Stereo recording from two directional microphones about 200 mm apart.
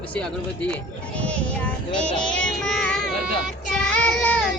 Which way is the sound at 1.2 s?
5° left (ahead or behind).